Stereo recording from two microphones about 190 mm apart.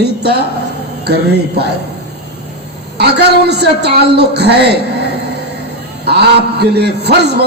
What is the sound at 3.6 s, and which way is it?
A man's voice, 60° right (ahead or behind).